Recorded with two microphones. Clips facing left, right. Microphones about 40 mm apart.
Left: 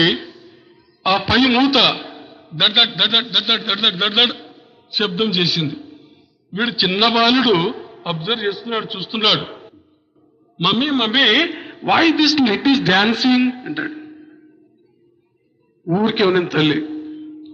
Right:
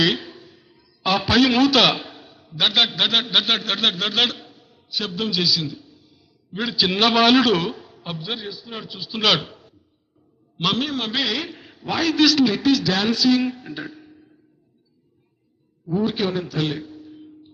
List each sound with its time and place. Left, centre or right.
0.0 s a man's voice: centre
0.3 s a sound: centre
0.5 s a man's voice: centre
4.9 s a man's voice: left
6.5 s a man's voice: left; by 7.4 s centre
7.4 s a man's voice: left
9.4 s a sound: left
10.6 s a man's voice: left
10.8 s a man's voice: left
15.9 s a man's voice: left